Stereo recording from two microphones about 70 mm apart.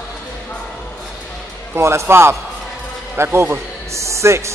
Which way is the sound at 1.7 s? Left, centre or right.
Right.